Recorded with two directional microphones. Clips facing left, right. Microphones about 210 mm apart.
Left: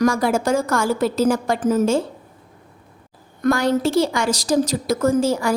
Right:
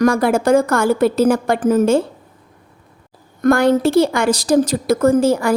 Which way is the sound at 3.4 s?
55° right (ahead or behind).